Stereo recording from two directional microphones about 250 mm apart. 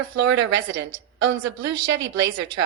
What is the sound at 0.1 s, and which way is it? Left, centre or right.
A woman's voice, right.